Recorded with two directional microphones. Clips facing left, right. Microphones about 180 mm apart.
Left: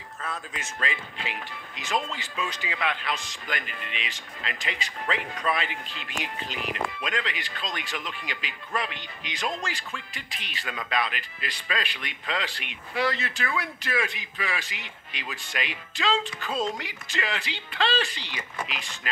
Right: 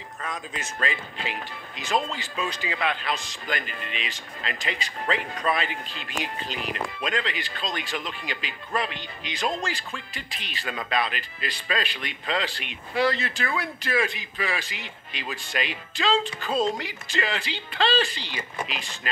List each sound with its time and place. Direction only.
0.5 s speech: 35° right (ahead or behind)